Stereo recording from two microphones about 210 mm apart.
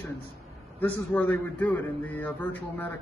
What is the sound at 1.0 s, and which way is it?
A man's voice, 10° left (ahead or behind).